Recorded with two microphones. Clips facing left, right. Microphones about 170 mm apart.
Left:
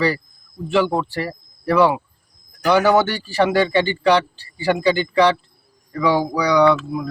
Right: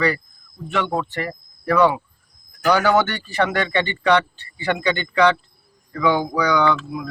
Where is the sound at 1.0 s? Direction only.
30° left (ahead or behind).